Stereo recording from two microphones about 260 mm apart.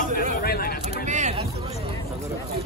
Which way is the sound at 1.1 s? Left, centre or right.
Right.